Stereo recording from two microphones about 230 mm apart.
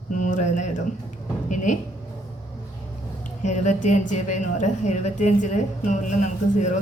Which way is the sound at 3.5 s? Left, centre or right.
Left.